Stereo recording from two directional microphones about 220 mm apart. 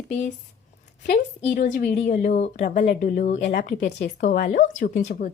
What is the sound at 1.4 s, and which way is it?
Speech, 35° left (ahead or behind).